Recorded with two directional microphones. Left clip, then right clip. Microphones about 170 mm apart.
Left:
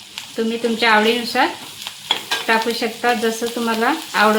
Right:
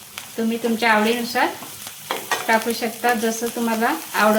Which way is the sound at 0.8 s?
40° left (ahead or behind).